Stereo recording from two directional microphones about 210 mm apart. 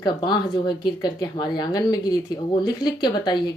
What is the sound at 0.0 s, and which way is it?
Speech, 20° left (ahead or behind).